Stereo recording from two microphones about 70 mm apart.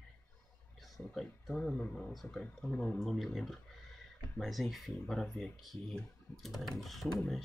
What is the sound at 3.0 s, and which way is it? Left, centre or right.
Speech, centre.